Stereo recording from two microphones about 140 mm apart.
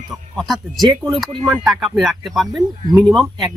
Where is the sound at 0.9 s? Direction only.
30° right (ahead or behind).